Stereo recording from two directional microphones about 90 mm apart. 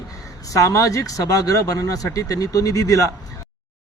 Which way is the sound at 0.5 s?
40° left (ahead or behind).